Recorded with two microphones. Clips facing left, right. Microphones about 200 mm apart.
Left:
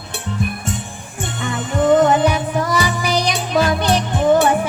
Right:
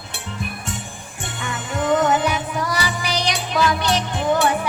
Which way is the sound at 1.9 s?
35° left (ahead or behind).